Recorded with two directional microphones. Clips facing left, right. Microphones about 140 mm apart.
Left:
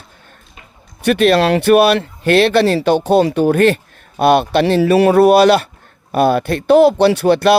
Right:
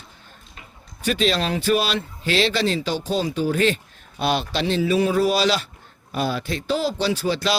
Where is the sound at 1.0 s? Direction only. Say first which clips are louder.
Left 10 dB; 60° left (ahead or behind).